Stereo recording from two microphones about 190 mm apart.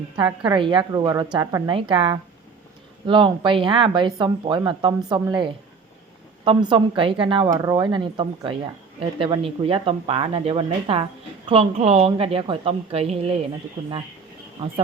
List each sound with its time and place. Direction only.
0.2 s a woman's voice: 25° right (ahead or behind)
14.6 s speech: 20° right (ahead or behind)